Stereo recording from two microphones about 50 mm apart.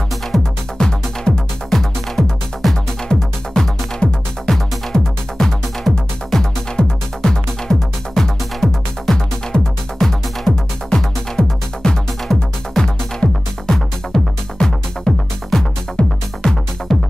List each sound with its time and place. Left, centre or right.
0.3 s music: centre
16.0 s music: left
16.9 s music: centre